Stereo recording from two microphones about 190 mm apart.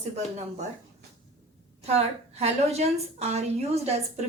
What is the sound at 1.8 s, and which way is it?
A woman's voice, 35° right (ahead or behind).